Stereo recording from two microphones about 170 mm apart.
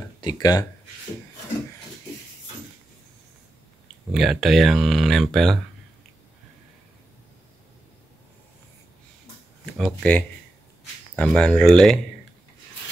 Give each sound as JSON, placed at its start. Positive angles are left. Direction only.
{"t": 0.2, "sound": "speech", "side_deg": 25}
{"t": 4.1, "sound": "speech", "side_deg": 0}
{"t": 9.8, "sound": "speech", "side_deg": 5}